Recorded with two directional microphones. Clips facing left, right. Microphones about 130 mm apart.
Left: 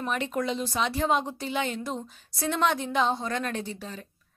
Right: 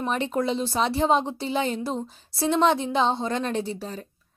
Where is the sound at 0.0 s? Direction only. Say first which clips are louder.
Right 4 dB; 30° right (ahead or behind).